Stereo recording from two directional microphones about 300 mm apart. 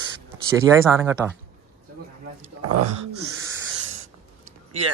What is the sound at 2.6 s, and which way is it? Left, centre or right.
Speech, right.